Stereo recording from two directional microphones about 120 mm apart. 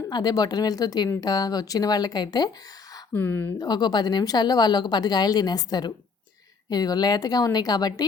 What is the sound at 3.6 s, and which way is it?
A woman's voice, 35° left (ahead or behind).